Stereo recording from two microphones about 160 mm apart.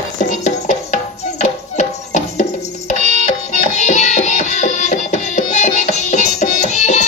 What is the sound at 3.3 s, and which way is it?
Music, 50° left (ahead or behind).